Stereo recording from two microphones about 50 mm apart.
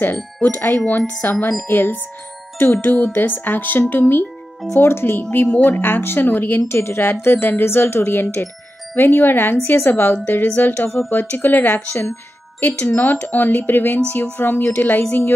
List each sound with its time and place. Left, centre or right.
0.0 s speech: left
4.7 s speech: left
5.5 s speech: left
6.7 s speech: left